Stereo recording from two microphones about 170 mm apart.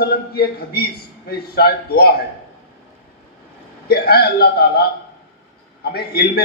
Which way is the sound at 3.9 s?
65° left (ahead or behind).